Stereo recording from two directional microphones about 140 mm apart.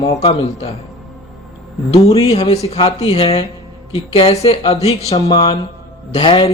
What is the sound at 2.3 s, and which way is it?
A man's voice, 45° left (ahead or behind).